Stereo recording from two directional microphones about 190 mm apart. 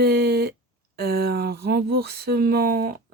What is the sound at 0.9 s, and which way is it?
Speech, 55° right (ahead or behind).